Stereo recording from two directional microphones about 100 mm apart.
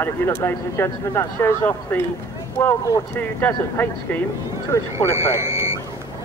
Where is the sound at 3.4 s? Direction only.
15° left (ahead or behind).